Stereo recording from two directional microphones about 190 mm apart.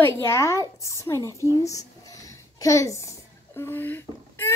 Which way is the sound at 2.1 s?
15° left (ahead or behind).